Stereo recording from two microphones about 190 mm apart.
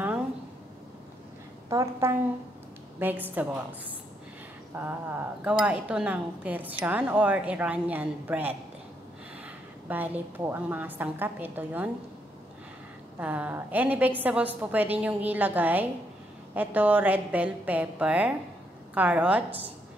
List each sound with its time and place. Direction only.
1.7 s a woman's voice: 15° right (ahead or behind)
4.7 s a woman's voice: 10° right (ahead or behind)
9.8 s a woman's voice: 10° right (ahead or behind)
13.2 s a woman's voice: 10° right (ahead or behind)